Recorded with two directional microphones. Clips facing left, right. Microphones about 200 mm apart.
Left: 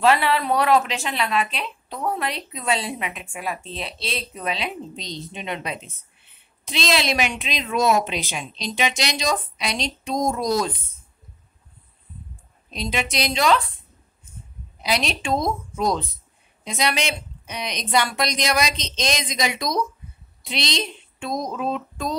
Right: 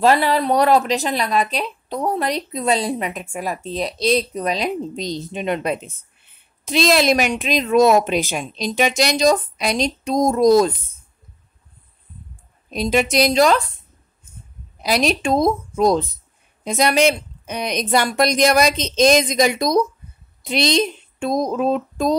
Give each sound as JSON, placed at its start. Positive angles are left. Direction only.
{"t": 0.0, "sound": "a woman's voice", "side_deg": -40}
{"t": 12.7, "sound": "speech", "side_deg": -50}
{"t": 14.8, "sound": "speech", "side_deg": -45}